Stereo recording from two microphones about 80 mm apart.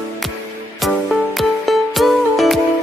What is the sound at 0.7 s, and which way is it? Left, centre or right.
Music, centre.